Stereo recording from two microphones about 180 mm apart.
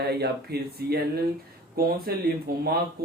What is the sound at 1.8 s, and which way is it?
Speech, 55° right (ahead or behind).